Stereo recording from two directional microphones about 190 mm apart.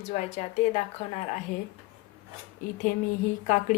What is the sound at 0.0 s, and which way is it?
Speech, 35° left (ahead or behind).